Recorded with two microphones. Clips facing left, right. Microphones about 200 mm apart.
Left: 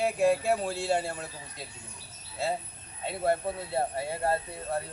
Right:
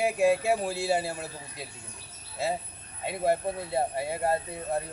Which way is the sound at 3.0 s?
15° right (ahead or behind).